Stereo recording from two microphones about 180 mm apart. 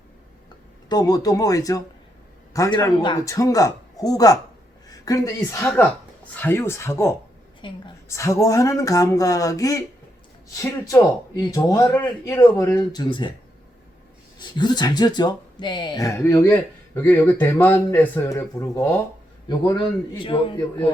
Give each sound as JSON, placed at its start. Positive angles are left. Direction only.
{"t": 0.9, "sound": "a man's voice", "side_deg": 20}
{"t": 14.3, "sound": "a man's voice", "side_deg": 25}